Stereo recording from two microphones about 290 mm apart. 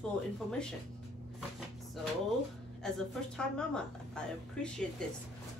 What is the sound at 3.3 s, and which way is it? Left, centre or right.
A woman's voice, centre.